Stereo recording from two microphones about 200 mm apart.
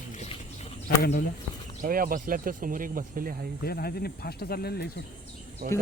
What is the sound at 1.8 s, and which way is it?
Speech, 45° right (ahead or behind).